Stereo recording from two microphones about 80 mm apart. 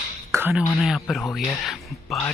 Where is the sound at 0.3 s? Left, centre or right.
Right.